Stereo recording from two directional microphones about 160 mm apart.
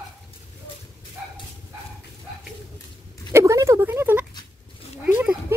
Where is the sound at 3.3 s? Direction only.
20° right (ahead or behind).